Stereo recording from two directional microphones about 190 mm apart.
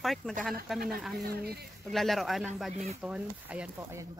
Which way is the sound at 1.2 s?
55° right (ahead or behind).